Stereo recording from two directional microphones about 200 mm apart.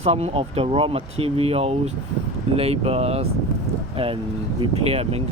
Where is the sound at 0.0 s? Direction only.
30° right (ahead or behind).